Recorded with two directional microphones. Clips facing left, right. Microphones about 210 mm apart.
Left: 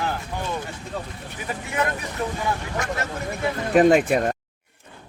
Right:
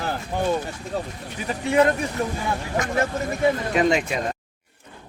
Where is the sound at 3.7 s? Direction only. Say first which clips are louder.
Left 5 dB; 50° left (ahead or behind).